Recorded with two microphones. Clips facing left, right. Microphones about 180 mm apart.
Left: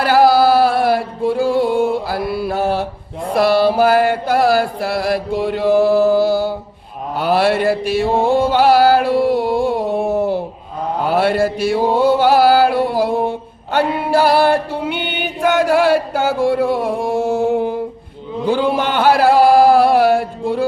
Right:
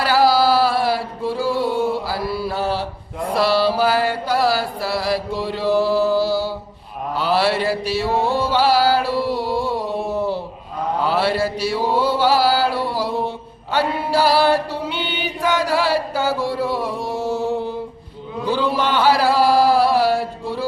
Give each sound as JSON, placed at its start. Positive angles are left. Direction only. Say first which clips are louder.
{"t": 0.0, "sound": "music", "louder": "left 4 dB", "side_deg": 50}
{"t": 3.3, "sound": "mantra", "louder": "left 5 dB", "side_deg": 50}
{"t": 13.7, "sound": "chant", "louder": "left 4 dB", "side_deg": 50}
{"t": 18.4, "sound": "a sound", "louder": "left 4 dB", "side_deg": 50}